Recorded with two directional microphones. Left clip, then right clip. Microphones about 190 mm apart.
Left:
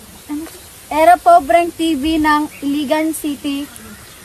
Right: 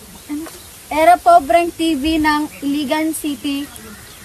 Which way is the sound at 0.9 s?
15° left (ahead or behind).